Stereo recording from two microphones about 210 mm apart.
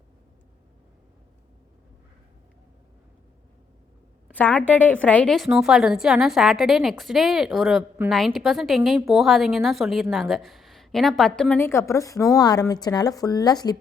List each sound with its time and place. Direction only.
4.3 s a woman's voice: 10° left (ahead or behind)